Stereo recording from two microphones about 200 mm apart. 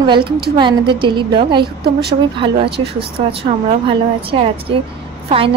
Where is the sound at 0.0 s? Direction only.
25° right (ahead or behind).